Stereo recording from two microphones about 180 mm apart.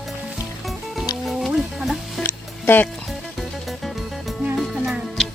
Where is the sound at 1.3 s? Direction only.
Centre (ahead or behind).